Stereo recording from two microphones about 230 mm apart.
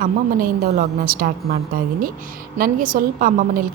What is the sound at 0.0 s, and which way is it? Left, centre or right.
A woman's voice, right.